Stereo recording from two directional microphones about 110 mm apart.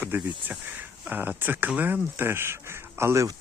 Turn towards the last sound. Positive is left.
turn(degrees=-25)  # may be behind; listen again after turning